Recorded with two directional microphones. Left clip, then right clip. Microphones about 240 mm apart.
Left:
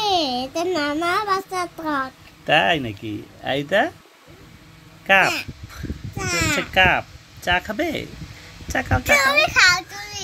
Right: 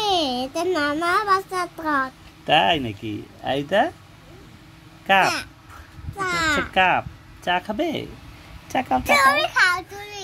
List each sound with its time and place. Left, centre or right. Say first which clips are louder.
0.0 s a sound: left 1 dB; centre
1.8 s a child's voice: right 2 dB; centre
2.9 s speech: even; left
3.4 s a child's voice: left 1 dB; centre
5.0 s a child's voice: left 2 dB; centre